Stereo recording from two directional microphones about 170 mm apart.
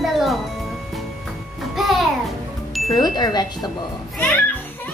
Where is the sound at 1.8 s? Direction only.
Centre (ahead or behind).